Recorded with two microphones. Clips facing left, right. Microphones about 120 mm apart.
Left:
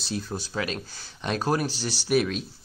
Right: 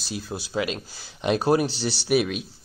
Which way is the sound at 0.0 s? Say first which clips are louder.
Left 1 dB; 5° right (ahead or behind).